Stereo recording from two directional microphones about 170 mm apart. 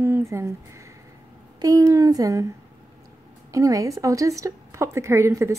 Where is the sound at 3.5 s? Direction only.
20° right (ahead or behind).